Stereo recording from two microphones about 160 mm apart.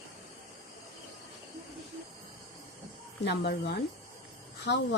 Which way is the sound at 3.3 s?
90° left.